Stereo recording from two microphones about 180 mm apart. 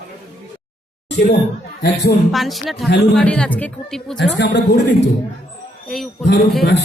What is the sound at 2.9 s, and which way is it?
Speech, 70° left (ahead or behind).